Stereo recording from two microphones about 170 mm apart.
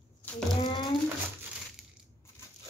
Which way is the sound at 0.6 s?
25° left (ahead or behind).